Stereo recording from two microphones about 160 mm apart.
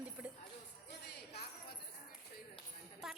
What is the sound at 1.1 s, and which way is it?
Jingle bell, 80° left.